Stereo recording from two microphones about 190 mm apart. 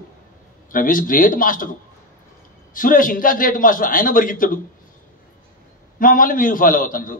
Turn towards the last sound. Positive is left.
turn(degrees=45)  # may be behind; listen again after turning